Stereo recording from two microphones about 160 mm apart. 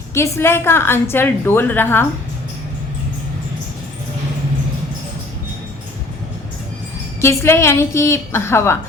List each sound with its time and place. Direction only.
0.1 s a woman's voice: 15° left (ahead or behind)
7.2 s a woman's voice: 15° left (ahead or behind)